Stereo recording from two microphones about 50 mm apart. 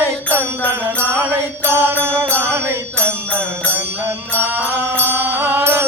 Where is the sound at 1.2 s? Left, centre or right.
Right.